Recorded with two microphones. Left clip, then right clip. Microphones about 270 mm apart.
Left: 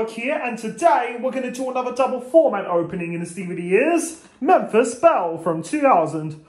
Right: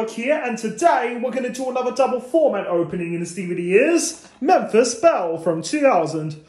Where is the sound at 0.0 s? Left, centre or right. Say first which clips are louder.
Right 2 dB; centre.